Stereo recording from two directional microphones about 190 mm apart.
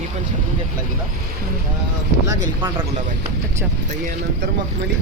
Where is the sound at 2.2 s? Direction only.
15° right (ahead or behind).